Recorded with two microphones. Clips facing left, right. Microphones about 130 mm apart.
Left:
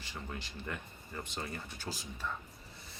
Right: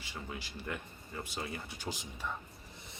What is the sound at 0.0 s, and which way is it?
Speech, 5° right (ahead or behind).